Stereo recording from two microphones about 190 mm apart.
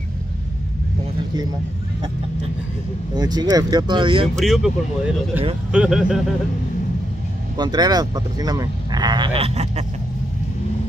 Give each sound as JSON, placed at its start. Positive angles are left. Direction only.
{"t": 3.2, "sound": "speech", "side_deg": -20}
{"t": 4.4, "sound": "speech", "side_deg": 0}
{"t": 7.5, "sound": "speech", "side_deg": -20}